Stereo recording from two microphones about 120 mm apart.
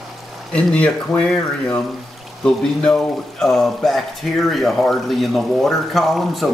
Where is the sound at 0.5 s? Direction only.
10° left (ahead or behind).